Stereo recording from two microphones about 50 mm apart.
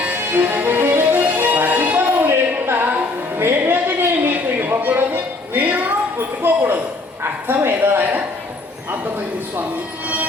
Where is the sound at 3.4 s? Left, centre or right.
Right.